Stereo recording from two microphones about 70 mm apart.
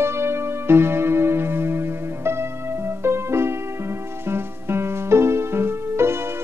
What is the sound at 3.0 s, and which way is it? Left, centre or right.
Music, right.